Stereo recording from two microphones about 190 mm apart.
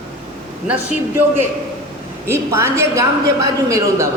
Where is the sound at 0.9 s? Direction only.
10° right (ahead or behind).